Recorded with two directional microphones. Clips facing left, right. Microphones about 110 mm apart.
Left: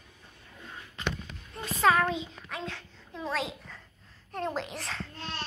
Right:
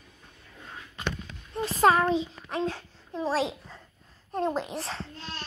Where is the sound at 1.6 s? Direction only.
35° right (ahead or behind).